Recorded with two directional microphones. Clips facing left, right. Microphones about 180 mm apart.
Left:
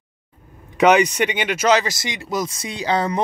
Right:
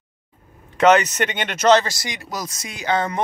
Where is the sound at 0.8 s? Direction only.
10° left (ahead or behind).